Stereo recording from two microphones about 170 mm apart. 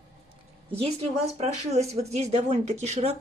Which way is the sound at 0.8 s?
35° right (ahead or behind).